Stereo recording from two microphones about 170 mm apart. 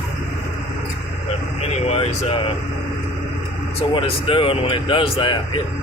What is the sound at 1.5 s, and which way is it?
Vehicle, 35° left (ahead or behind).